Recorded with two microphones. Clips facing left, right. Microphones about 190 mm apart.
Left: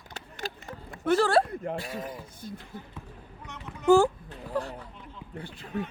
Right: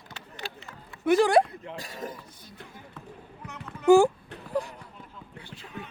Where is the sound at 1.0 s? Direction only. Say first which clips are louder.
Right 2 dB; 15° right (ahead or behind).